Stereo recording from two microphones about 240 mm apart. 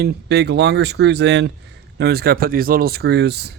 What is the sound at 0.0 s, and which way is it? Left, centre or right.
Speech, right.